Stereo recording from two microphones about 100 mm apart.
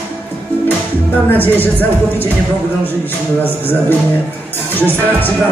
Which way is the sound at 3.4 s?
20° left (ahead or behind).